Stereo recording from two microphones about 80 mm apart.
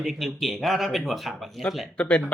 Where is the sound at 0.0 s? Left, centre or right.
Centre.